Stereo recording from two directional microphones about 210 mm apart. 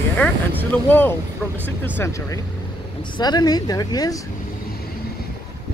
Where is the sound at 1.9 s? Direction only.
15° left (ahead or behind).